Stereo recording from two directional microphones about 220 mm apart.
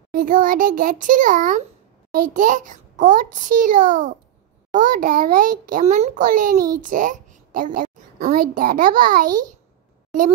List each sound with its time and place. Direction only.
0.1 s a child's voice: 40° right (ahead or behind)